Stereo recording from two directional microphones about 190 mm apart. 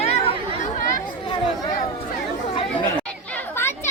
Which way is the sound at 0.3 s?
40° left (ahead or behind).